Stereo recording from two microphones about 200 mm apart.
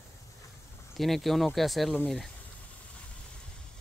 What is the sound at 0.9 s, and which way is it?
Speech, centre (ahead or behind).